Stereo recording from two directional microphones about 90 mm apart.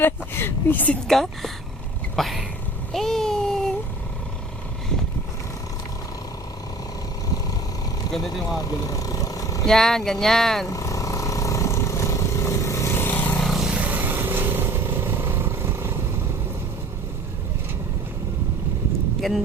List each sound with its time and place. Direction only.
0.0 s speech: 25° left (ahead or behind)
1.0 s speech: centre (ahead or behind)
2.9 s a sound: 5° left (ahead or behind)
8.9 s vehicle: 40° left (ahead or behind)
9.6 s speech: 5° left (ahead or behind)
10.7 s vehicle: 35° left (ahead or behind); by 13.4 s 20° left (ahead or behind)
13.4 s vehicle: centre (ahead or behind)
13.7 s vehicle: 20° right (ahead or behind)
19.2 s speech: 5° left (ahead or behind)